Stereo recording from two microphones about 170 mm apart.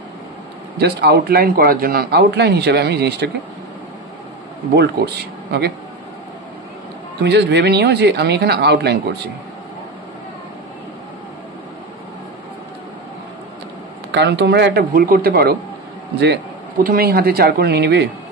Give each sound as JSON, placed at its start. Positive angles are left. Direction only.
{"t": 0.7, "sound": "speech", "side_deg": -70}
{"t": 4.7, "sound": "speech", "side_deg": -75}
{"t": 7.2, "sound": "speech", "side_deg": -80}
{"t": 14.1, "sound": "speech", "side_deg": -80}
{"t": 16.8, "sound": "speech", "side_deg": -60}